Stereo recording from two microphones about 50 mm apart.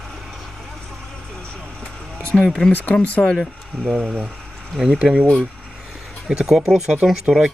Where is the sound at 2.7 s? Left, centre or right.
Left.